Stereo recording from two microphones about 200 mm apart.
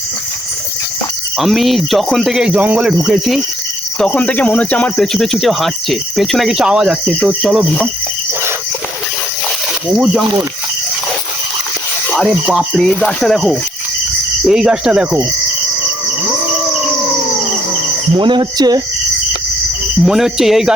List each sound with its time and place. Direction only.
1.4 s speech: centre (ahead or behind)
12.0 s speech: centre (ahead or behind)
18.2 s speech: 20° right (ahead or behind)
20.0 s speech: centre (ahead or behind)